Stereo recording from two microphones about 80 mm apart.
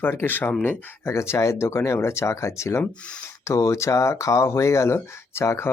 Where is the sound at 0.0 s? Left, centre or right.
Left.